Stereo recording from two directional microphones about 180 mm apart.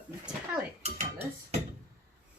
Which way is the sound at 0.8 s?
35° right (ahead or behind).